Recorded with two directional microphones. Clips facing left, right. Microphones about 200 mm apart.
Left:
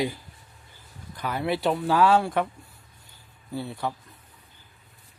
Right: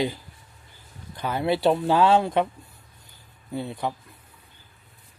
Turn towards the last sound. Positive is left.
turn(degrees=-20)  # may be behind; listen again after turning